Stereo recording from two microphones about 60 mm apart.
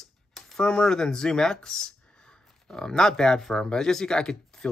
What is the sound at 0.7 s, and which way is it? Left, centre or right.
Speech, centre.